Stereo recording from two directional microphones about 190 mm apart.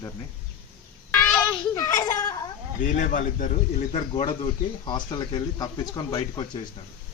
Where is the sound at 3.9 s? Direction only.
30° left (ahead or behind).